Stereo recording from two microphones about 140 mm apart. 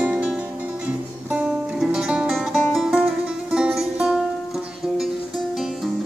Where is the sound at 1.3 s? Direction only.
5° right (ahead or behind).